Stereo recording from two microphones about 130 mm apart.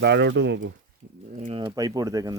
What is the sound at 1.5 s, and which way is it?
Speech, 30° right (ahead or behind).